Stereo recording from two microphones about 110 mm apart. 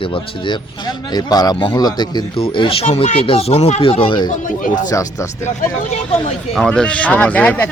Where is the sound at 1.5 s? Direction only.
55° left (ahead or behind).